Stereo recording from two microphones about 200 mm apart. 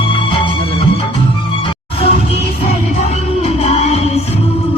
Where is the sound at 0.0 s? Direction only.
25° left (ahead or behind).